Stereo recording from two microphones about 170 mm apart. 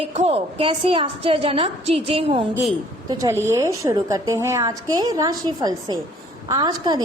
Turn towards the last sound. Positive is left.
turn(degrees=-25)  # may be behind; listen again after turning